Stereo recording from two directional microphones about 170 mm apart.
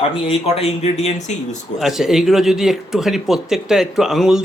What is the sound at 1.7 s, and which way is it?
Speech, centre (ahead or behind).